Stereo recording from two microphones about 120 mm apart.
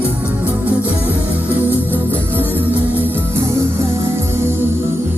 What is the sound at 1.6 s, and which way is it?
Music, 20° left (ahead or behind).